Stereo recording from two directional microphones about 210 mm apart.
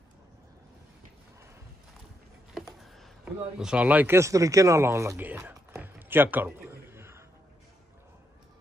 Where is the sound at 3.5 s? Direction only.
5° right (ahead or behind).